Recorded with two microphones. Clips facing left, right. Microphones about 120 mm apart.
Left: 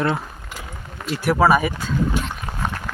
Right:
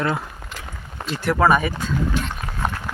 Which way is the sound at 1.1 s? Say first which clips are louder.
Left 1 dB; 5° left (ahead or behind).